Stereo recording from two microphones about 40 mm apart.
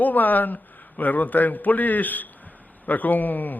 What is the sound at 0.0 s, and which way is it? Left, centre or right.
Speech, left.